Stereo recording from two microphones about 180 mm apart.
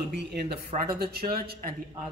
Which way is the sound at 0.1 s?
65° right (ahead or behind).